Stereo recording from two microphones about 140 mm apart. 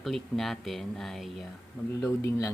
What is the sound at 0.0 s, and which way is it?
Speech, centre (ahead or behind).